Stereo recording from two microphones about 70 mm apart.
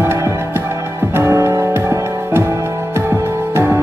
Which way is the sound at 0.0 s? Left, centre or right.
Right.